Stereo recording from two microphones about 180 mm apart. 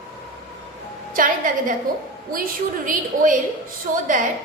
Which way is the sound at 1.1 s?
50° right (ahead or behind).